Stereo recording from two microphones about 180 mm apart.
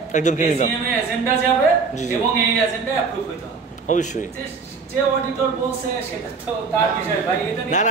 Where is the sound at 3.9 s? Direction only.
40° left (ahead or behind).